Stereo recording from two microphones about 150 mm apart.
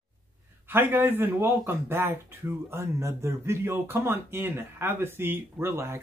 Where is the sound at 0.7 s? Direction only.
15° right (ahead or behind).